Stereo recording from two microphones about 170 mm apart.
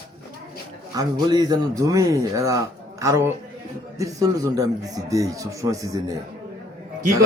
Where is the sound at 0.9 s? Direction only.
20° right (ahead or behind).